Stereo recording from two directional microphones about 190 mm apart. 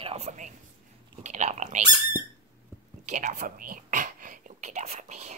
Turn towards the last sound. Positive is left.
turn(degrees=-35)  # may be behind; listen again after turning